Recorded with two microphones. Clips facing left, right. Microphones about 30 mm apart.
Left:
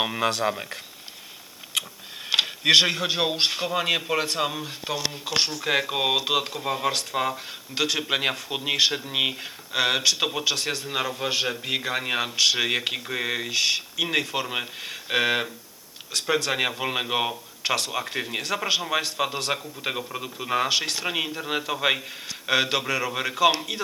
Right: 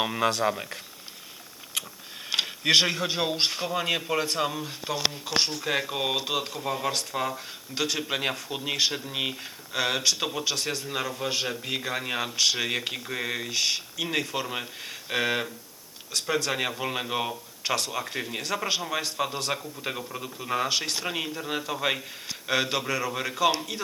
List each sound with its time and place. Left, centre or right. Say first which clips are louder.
0.0 s a man's voice: left 1 dB; centre
2.3 s a man's voice: left 4 dB; centre